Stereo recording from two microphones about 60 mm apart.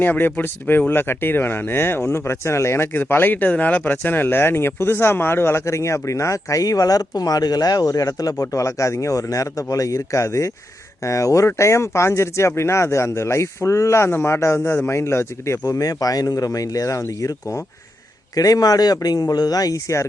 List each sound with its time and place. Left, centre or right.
0.0 s speech: left
15.6 s speech: left
18.3 s speech: left